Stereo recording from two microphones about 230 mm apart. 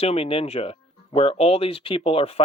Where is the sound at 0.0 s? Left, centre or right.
Left.